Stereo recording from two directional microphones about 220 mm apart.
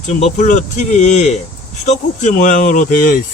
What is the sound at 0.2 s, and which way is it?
Speech, 35° left (ahead or behind).